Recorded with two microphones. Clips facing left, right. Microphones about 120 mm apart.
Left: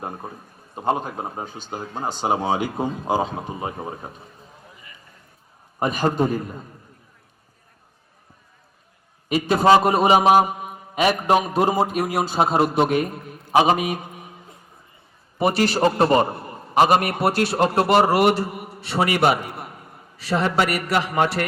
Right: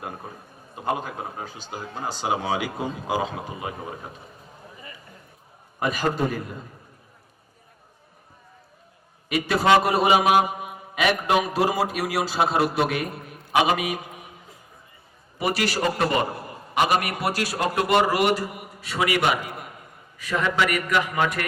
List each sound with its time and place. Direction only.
0.8 s a man's voice: 30° left (ahead or behind)
6.0 s a man's voice: 25° left (ahead or behind)
9.3 s a man's voice: 30° left (ahead or behind)
11.6 s a man's voice: 25° left (ahead or behind)
15.4 s a man's voice: 25° left (ahead or behind)
16.7 s a man's voice: 35° left (ahead or behind)